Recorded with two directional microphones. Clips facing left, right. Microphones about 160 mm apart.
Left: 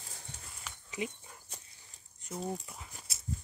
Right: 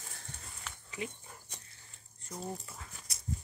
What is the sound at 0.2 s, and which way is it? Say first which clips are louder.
Livestock: even; 15° left (ahead or behind).